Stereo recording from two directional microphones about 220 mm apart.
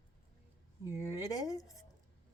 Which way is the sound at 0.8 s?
15° left (ahead or behind).